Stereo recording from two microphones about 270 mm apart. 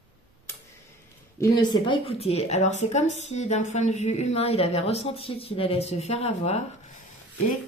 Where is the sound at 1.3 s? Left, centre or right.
Centre.